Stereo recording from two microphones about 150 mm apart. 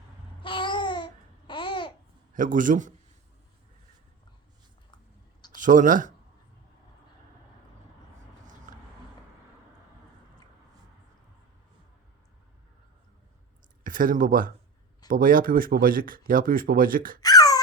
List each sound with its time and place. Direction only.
0.4 s babbling: 35° left (ahead or behind)
2.3 s a man's voice: 60° right (ahead or behind)
5.5 s speech: 60° right (ahead or behind)
8.7 s vehicle: 60° right (ahead or behind)
13.8 s speech: 65° right (ahead or behind)
17.2 s a sound: 25° left (ahead or behind)